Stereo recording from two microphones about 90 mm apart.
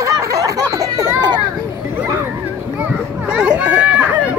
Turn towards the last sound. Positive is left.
turn(degrees=-15)  # may be behind; listen again after turning